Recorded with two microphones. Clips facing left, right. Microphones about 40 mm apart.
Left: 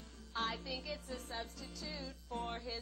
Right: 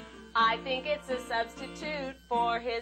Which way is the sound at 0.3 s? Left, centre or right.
Right.